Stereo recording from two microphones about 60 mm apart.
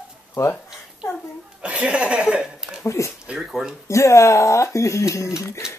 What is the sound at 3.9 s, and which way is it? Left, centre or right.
Speech, left.